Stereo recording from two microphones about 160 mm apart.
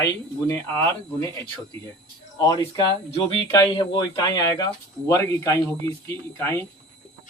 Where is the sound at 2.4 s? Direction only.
25° left (ahead or behind).